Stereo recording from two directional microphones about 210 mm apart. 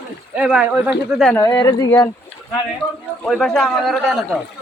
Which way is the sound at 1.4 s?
15° left (ahead or behind).